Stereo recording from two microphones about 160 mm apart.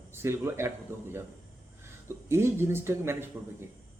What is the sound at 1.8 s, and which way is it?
A man's voice, 15° right (ahead or behind).